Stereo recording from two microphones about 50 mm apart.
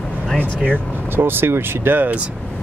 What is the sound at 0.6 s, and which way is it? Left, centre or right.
Speech, right.